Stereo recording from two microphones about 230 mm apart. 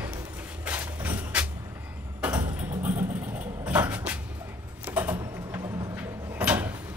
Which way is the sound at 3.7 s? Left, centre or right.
Centre.